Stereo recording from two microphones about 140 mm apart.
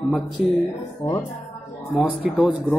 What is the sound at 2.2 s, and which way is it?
Speech, 10° right (ahead or behind).